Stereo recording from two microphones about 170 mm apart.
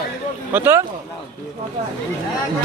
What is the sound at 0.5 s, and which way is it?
Speech, 15° right (ahead or behind).